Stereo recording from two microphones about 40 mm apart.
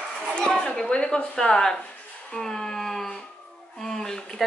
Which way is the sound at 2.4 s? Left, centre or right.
Centre.